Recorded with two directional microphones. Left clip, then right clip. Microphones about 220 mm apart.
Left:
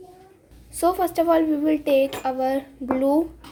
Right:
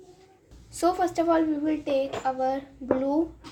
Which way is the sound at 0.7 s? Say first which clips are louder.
Left 3 dB; 15° left (ahead or behind).